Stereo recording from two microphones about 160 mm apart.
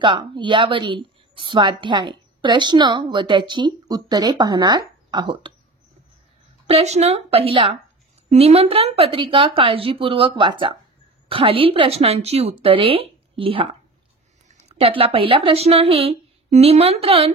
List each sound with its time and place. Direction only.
0.0 s a woman's voice: 30° right (ahead or behind)
6.7 s a woman's voice: 45° right (ahead or behind)
14.7 s a woman's voice: 35° right (ahead or behind)